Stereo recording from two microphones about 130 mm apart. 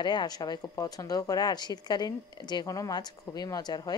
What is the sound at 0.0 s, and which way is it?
A woman's voice, 35° left (ahead or behind).